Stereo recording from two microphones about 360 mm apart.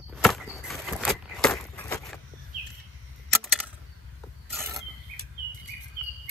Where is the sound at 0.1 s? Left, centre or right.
Centre.